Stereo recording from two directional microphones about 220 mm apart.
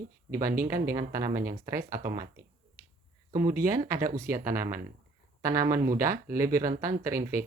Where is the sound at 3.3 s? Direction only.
15° right (ahead or behind).